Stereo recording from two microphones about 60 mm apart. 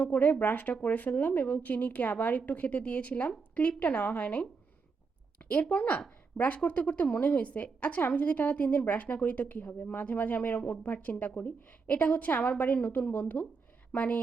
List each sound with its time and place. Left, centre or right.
0.0 s a woman's voice: left